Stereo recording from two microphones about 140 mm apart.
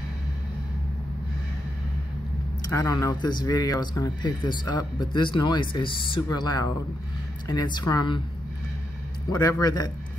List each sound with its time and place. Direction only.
2.7 s speech: 20° left (ahead or behind)
9.4 s a man's voice: 25° left (ahead or behind)